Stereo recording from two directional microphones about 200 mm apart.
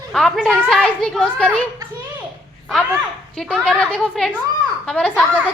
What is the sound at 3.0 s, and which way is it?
A woman's voice, centre (ahead or behind).